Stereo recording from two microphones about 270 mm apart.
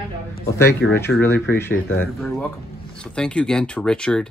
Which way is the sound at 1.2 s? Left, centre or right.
Centre.